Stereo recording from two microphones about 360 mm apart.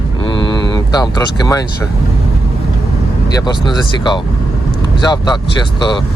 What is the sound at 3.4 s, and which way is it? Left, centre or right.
Speech, centre.